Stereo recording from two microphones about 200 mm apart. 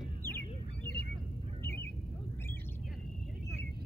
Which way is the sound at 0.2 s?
10° left (ahead or behind).